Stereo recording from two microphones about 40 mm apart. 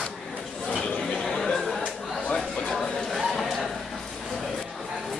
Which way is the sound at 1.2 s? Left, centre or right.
Centre.